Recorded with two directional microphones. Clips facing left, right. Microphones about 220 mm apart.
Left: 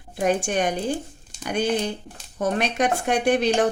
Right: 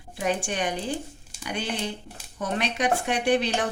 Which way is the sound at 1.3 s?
10° right (ahead or behind).